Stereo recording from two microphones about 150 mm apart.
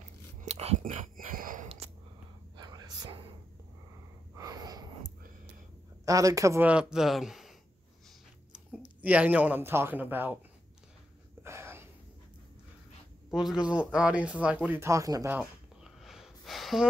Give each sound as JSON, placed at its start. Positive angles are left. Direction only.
{"t": 0.4, "sound": "whispering", "side_deg": -45}
{"t": 1.0, "sound": "wheeze", "side_deg": -65}
{"t": 2.5, "sound": "whispering", "side_deg": -25}
{"t": 4.4, "sound": "a sound", "side_deg": -25}
{"t": 6.0, "sound": "speech", "side_deg": -20}
{"t": 6.7, "sound": "speech", "side_deg": -5}
{"t": 9.0, "sound": "speech", "side_deg": -10}
{"t": 11.4, "sound": "a sound", "side_deg": -15}
{"t": 13.3, "sound": "speech", "side_deg": -5}
{"t": 15.3, "sound": "a sound", "side_deg": -5}